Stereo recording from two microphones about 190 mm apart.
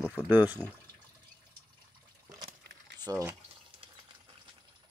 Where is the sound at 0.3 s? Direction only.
10° right (ahead or behind).